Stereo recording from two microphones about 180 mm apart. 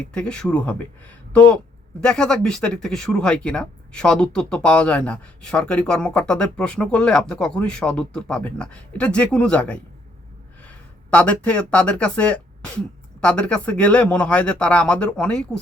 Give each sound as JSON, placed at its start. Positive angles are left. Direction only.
{"t": 0.1, "sound": "speech", "side_deg": 5}